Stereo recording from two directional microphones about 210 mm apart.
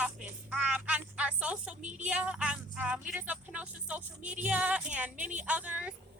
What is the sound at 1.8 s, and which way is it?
Speech, 35° right (ahead or behind).